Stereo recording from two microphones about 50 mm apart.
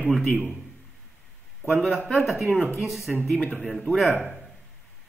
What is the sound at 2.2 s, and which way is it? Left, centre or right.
Speech, centre.